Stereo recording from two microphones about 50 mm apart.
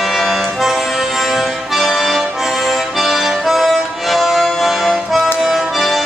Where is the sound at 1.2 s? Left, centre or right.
Centre.